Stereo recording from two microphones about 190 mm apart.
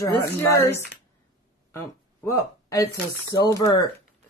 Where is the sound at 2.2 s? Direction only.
15° left (ahead or behind).